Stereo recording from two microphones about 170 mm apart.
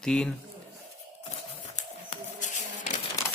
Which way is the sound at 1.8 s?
45° left (ahead or behind).